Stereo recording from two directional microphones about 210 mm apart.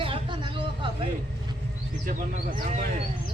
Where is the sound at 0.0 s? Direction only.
25° right (ahead or behind).